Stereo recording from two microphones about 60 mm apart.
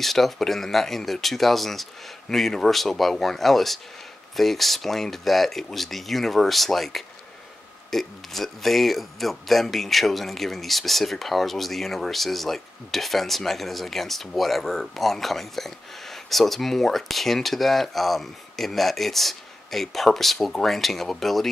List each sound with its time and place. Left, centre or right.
0.0 s speech: centre